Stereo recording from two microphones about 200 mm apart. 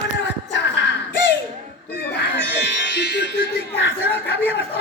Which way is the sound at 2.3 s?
60° left (ahead or behind).